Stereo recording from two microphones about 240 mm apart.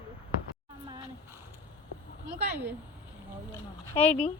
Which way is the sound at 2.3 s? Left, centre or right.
Centre.